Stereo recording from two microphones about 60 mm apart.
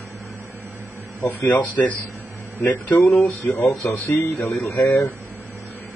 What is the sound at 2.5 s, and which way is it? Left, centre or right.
Speech, left.